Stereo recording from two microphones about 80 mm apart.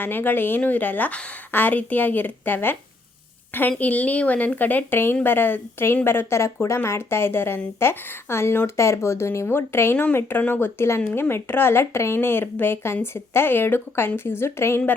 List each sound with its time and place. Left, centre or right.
0.0 s a woman's voice: left